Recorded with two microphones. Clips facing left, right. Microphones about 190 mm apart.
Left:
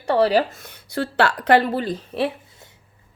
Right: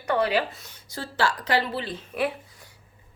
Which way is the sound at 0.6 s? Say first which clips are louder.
Left 10 dB; 65° left (ahead or behind).